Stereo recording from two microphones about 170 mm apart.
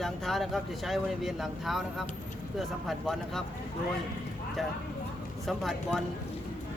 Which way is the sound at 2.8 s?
Centre (ahead or behind).